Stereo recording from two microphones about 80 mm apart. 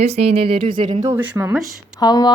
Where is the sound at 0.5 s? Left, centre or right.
Right.